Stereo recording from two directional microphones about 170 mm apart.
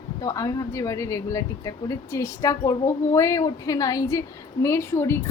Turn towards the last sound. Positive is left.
turn(degrees=15)  # may be behind; listen again after turning